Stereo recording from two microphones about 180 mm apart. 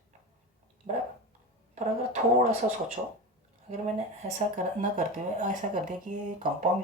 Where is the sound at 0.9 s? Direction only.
35° right (ahead or behind).